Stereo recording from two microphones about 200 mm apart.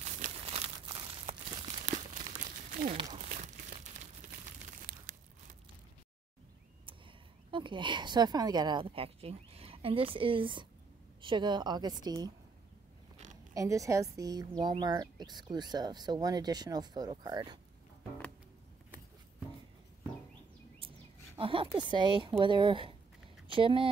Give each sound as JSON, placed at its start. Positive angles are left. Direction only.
{"t": 0.2, "sound": "crumpling", "side_deg": -30}
{"t": 2.9, "sound": "crumpling", "side_deg": -30}
{"t": 4.8, "sound": "a sound", "side_deg": -40}
{"t": 7.5, "sound": "speech", "side_deg": -25}
{"t": 13.5, "sound": "speech", "side_deg": -15}
{"t": 21.4, "sound": "speech", "side_deg": -25}